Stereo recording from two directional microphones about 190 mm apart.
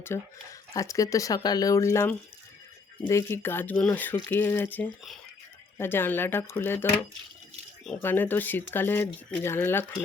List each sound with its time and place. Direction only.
0.1 s speech: 15° left (ahead or behind)